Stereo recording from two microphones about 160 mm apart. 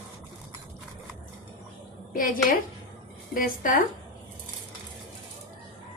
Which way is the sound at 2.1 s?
60° left (ahead or behind).